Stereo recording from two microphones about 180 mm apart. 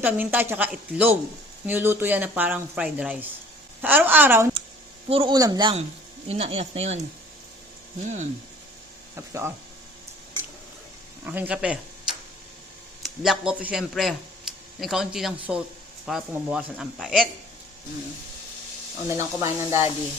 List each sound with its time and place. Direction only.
0.0 s speech: 10° right (ahead or behind)
5.0 s speech: 30° right (ahead or behind)
8.0 s speech: 45° right (ahead or behind)
9.1 s speech: 15° right (ahead or behind)
11.2 s speech: 10° right (ahead or behind)
13.0 s a man's voice: centre (ahead or behind)
19.0 s speech: 15° right (ahead or behind)